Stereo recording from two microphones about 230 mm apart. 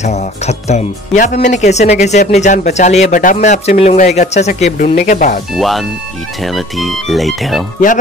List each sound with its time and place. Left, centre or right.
0.0 s speech: left
5.6 s speech: centre